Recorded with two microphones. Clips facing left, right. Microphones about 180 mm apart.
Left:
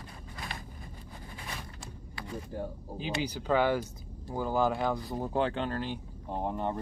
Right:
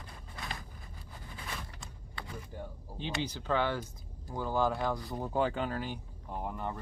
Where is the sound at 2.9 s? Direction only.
10° left (ahead or behind).